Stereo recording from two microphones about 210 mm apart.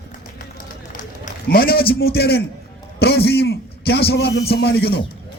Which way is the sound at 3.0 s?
50° left (ahead or behind).